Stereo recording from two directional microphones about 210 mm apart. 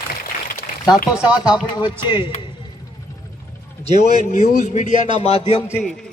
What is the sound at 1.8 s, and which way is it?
Speech, 20° left (ahead or behind).